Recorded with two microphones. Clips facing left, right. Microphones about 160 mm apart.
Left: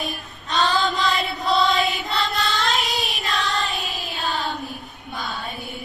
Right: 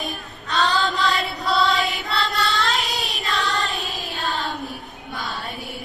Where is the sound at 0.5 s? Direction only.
20° left (ahead or behind).